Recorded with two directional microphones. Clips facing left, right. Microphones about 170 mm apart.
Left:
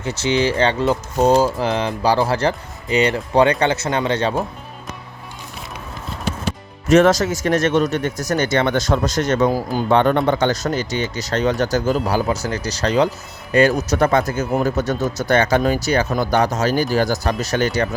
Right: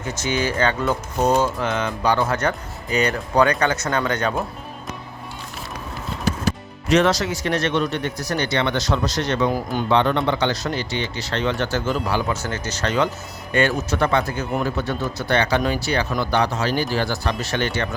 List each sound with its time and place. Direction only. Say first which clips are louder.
0.0 s speech: left 5 dB; 25° left (ahead or behind)
6.8 s speech: left 5 dB; 45° left (ahead or behind)
9.5 s speech: left 3 dB; 35° left (ahead or behind)
9.9 s speech: left 4 dB; 45° left (ahead or behind)